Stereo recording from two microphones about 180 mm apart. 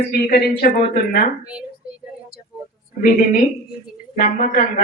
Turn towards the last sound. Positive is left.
turn(degrees=55)  # may be behind; listen again after turning